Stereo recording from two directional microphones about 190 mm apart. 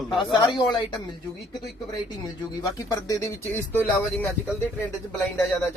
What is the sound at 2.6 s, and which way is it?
Speech, 20° left (ahead or behind).